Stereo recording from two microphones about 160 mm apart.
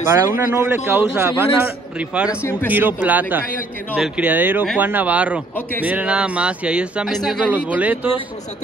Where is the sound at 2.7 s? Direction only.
10° right (ahead or behind).